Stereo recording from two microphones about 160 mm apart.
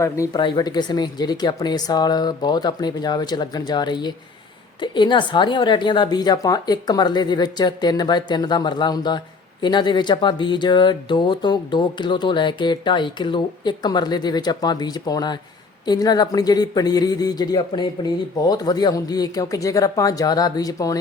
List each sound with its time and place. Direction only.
0.0 s a woman's voice: 20° left (ahead or behind)